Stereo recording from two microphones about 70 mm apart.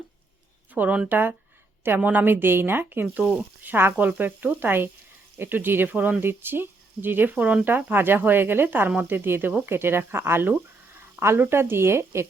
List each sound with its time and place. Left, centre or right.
0.7 s speech: right
10.9 s a sound: right
11.3 s speech: right